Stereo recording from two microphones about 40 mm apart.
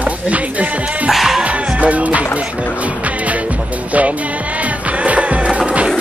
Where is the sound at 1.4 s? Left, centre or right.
Right.